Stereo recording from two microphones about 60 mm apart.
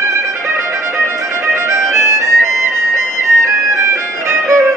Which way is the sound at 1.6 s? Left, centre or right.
Right.